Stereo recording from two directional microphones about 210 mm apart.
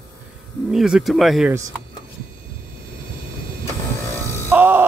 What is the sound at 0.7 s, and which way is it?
Speech, 5° right (ahead or behind).